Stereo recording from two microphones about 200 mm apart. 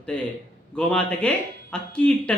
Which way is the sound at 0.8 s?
5° left (ahead or behind).